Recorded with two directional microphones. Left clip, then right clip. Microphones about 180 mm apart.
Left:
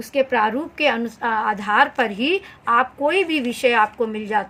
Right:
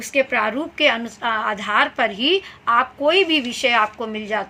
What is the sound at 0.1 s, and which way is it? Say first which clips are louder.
A woman's voice: left 1 dB; 55° left (ahead or behind).